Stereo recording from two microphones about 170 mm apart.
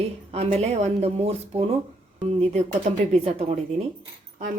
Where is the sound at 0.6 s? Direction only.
40° right (ahead or behind).